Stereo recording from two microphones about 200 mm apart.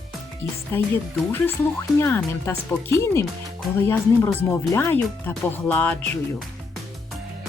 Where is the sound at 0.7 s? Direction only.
10° left (ahead or behind).